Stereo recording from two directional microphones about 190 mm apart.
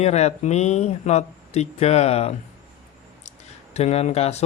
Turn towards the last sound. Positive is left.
turn(degrees=35)  # may be behind; listen again after turning